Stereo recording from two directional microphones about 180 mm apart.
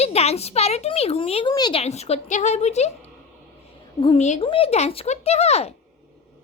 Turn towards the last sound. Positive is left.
turn(degrees=35)  # may be behind; listen again after turning